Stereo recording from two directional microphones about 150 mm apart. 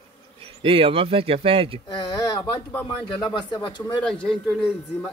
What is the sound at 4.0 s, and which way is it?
A man's voice, 5° left (ahead or behind).